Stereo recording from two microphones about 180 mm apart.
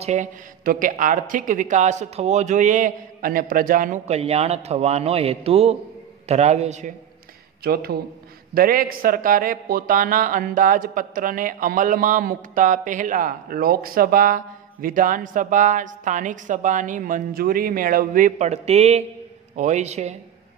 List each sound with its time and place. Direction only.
0.0 s a man's voice: 45° right (ahead or behind)
7.6 s a man's voice: 60° right (ahead or behind); by 20.2 s 40° right (ahead or behind)